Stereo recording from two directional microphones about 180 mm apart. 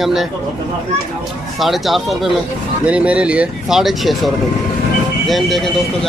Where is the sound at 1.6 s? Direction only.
Centre (ahead or behind).